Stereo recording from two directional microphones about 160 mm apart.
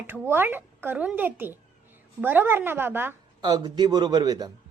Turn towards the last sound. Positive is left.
turn(degrees=-25)  # may be behind; listen again after turning